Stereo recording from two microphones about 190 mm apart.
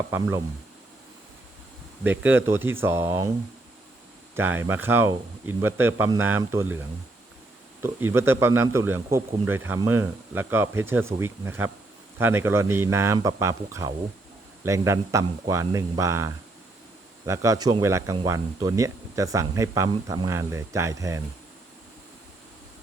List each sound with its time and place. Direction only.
0.1 s speech: 15° right (ahead or behind)
2.0 s speech: 10° right (ahead or behind)
4.4 s speech: 10° right (ahead or behind)
7.8 s speech: 10° right (ahead or behind)